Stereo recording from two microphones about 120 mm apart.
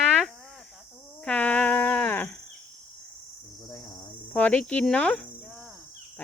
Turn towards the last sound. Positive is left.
turn(degrees=10)  # may be behind; listen again after turning